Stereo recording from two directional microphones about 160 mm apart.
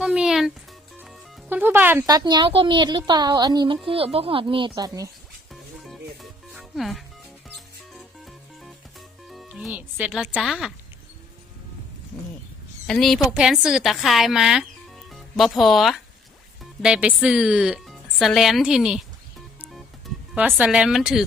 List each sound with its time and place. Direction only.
0.0 s music: 5° right (ahead or behind)
2.0 s speech: 25° right (ahead or behind)
6.5 s music: centre (ahead or behind)
9.3 s a woman's voice: 5° right (ahead or behind)
12.9 s a woman's voice: centre (ahead or behind)
20.6 s a woman's voice: 5° right (ahead or behind)